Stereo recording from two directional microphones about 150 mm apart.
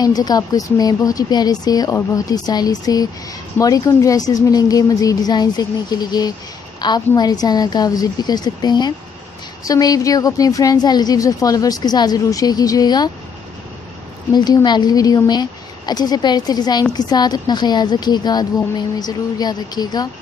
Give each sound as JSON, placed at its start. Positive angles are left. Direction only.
{"t": 0.0, "sound": "a woman's voice", "side_deg": 25}
{"t": 14.3, "sound": "a woman's voice", "side_deg": 30}